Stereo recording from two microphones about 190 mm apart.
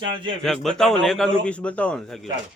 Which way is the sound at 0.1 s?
25° right (ahead or behind).